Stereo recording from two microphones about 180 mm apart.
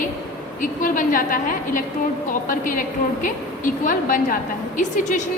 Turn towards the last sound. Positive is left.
turn(degrees=40)  # may be behind; listen again after turning